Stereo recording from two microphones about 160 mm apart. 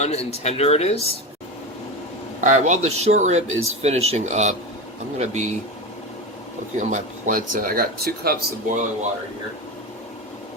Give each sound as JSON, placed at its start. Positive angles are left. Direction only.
{"t": 0.0, "sound": "speech", "side_deg": 40}
{"t": 2.4, "sound": "speech", "side_deg": -50}
{"t": 6.7, "sound": "speech", "side_deg": -50}